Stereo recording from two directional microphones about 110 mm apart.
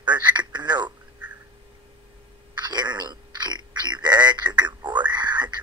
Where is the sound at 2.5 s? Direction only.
40° right (ahead or behind).